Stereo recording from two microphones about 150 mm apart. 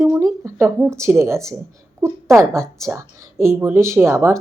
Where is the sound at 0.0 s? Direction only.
20° right (ahead or behind).